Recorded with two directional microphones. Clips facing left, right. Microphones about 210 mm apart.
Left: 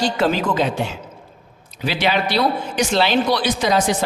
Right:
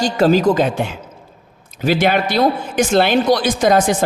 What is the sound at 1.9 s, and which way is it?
A man's voice, 50° right (ahead or behind).